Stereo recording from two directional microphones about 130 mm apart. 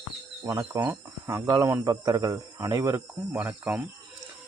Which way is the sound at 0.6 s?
20° right (ahead or behind).